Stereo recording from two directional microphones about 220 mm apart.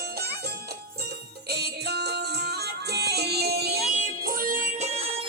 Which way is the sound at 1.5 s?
45° right (ahead or behind).